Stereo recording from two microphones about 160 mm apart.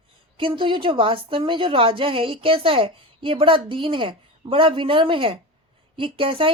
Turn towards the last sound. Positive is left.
turn(degrees=-35)  # may be behind; listen again after turning